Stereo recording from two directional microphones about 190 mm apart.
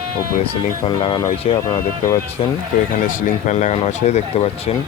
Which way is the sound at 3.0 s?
40° left (ahead or behind).